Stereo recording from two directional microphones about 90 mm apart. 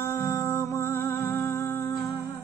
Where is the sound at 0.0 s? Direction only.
30° left (ahead or behind).